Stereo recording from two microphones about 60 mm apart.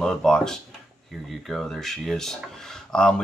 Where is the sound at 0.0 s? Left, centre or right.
Centre.